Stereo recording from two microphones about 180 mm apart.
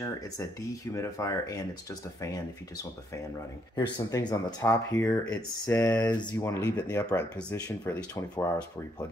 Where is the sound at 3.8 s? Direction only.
20° left (ahead or behind).